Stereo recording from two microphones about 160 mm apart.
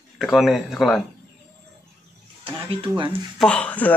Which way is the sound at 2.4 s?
35° right (ahead or behind).